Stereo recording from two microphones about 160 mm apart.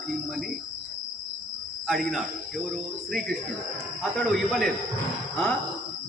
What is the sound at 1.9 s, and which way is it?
Speech, centre (ahead or behind).